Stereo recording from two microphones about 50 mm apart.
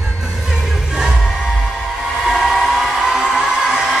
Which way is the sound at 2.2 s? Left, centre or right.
Centre.